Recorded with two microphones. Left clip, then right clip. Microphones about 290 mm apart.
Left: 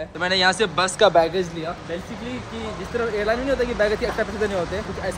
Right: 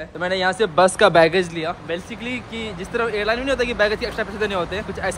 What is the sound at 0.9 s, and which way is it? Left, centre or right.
Speech, right.